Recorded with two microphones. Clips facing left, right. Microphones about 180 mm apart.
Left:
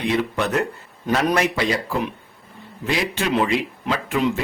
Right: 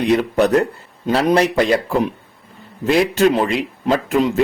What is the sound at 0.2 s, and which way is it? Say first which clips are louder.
A man's voice: right 7 dB; 40° right (ahead or behind).